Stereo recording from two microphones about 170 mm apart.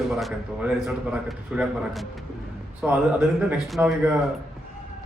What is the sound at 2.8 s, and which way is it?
A man's voice, 10° right (ahead or behind).